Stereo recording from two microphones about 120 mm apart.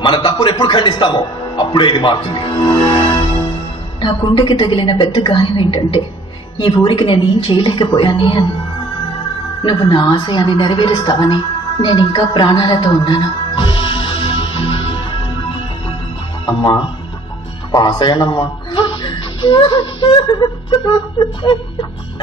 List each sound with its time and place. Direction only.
0.0 s a man's voice: 40° left (ahead or behind)
9.6 s a woman's voice: 40° left (ahead or behind)
12.1 s music: 40° left (ahead or behind)
16.4 s a woman's voice: 40° left (ahead or behind)